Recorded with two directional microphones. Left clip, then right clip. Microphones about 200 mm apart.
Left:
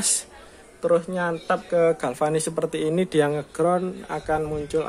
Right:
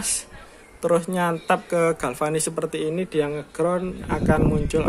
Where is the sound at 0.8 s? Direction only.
20° right (ahead or behind).